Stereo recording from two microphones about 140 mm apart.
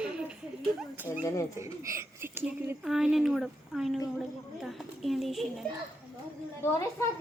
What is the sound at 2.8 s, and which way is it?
Speech, 5° right (ahead or behind).